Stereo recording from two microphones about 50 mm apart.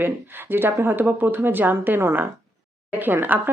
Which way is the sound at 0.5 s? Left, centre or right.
Right.